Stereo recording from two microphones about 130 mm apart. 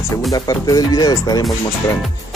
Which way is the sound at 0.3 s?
30° left (ahead or behind).